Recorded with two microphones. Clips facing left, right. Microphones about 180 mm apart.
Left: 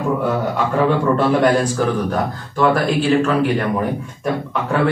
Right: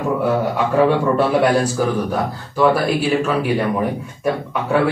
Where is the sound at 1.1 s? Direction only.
10° right (ahead or behind).